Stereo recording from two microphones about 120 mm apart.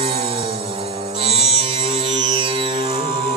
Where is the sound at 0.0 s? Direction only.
50° right (ahead or behind).